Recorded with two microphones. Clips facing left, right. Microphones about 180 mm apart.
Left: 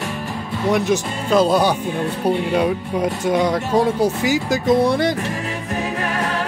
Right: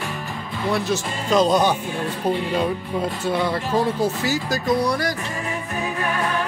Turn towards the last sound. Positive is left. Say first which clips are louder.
# left 5 dB
turn(degrees=25)  # may be behind; listen again after turning